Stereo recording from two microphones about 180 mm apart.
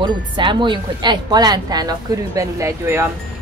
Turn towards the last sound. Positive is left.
turn(degrees=-15)  # may be behind; listen again after turning